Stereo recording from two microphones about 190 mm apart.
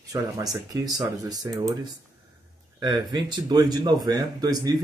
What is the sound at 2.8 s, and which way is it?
Speech, 20° right (ahead or behind).